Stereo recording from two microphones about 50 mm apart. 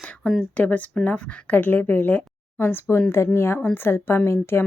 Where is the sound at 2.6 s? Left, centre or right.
Left.